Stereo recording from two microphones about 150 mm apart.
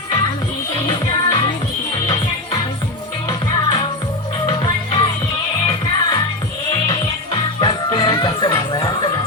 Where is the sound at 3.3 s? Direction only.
30° left (ahead or behind).